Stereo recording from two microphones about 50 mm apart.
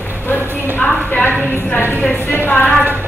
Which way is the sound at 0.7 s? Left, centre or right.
Left.